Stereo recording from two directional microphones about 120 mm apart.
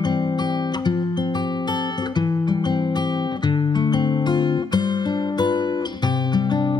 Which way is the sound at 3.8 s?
35° left (ahead or behind).